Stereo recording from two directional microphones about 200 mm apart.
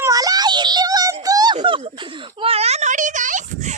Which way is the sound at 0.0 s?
20° right (ahead or behind).